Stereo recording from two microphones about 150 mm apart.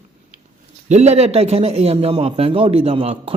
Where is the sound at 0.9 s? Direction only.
45° right (ahead or behind).